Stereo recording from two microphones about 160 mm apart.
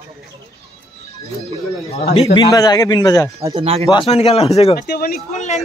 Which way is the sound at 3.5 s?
40° right (ahead or behind).